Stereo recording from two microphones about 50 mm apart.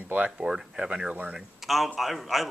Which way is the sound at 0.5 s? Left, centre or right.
Centre.